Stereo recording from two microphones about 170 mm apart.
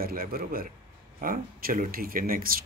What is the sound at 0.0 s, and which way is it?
Speech, 60° right (ahead or behind).